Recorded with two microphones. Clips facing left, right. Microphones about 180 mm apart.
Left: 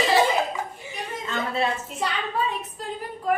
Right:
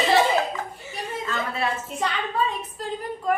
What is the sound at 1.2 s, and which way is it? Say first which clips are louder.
Speech: left 3 dB; 25° left (ahead or behind).